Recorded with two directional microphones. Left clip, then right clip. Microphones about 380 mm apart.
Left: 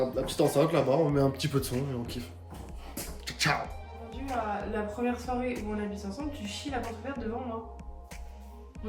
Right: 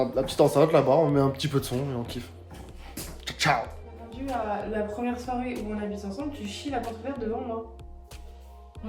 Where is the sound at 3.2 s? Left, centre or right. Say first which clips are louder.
Right 4 dB; centre.